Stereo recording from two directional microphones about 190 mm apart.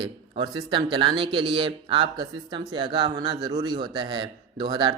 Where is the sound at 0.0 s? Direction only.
25° right (ahead or behind).